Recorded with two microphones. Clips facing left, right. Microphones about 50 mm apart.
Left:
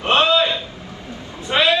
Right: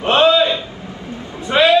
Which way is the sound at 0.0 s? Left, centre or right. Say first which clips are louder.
Right 3 dB; right.